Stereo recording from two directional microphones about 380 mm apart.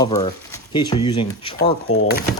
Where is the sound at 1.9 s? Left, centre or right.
Left.